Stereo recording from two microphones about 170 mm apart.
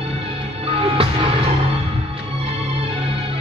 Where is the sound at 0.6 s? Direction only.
30° right (ahead or behind).